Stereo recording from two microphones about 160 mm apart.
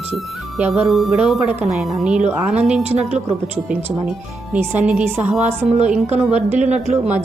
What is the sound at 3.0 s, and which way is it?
Speech, 45° right (ahead or behind).